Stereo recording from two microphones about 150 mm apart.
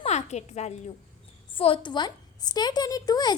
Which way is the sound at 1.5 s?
35° left (ahead or behind).